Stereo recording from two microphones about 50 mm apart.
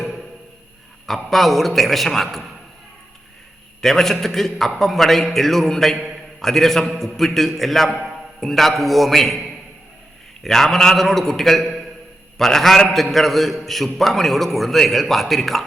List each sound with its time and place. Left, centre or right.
1.0 s a man's voice: centre
3.8 s a man's voice: centre
10.4 s a man's voice: centre
12.4 s a man's voice: centre